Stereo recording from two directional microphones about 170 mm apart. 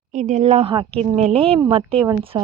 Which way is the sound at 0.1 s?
45° right (ahead or behind).